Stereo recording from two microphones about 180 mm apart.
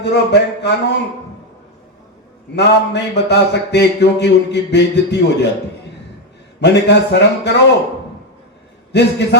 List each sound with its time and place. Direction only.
0.0 s a man's voice: 70° left (ahead or behind)
2.6 s a man's voice: 70° left (ahead or behind)
6.6 s a man's voice: 70° left (ahead or behind)
8.9 s a man's voice: 70° left (ahead or behind)